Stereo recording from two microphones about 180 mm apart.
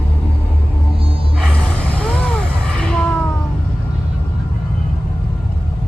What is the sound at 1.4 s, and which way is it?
Gasp, 5° left (ahead or behind).